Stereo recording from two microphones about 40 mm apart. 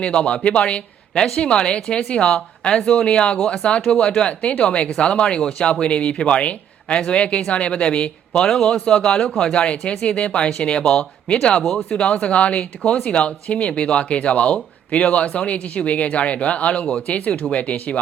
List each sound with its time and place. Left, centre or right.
0.0 s speech: left
1.1 s a woman's voice: centre
3.3 s speech: centre
3.6 s speech: centre
5.8 s speech: left
9.6 s speech: left
11.6 s speech: centre
11.9 s speech: left
17.2 s speech: left